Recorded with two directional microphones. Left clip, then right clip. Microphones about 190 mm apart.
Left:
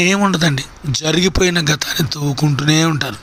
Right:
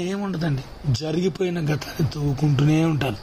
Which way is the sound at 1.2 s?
5° left (ahead or behind).